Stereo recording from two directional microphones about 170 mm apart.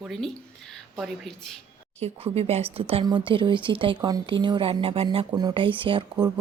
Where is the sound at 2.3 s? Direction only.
35° right (ahead or behind).